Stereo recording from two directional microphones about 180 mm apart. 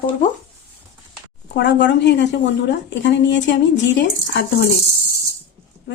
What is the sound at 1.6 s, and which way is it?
A woman's voice, 75° left (ahead or behind).